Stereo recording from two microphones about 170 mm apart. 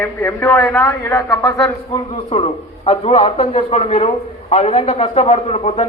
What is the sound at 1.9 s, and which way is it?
A man's voice, 35° left (ahead or behind).